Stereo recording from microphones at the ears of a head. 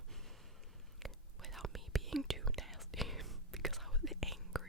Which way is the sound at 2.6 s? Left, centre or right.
Centre.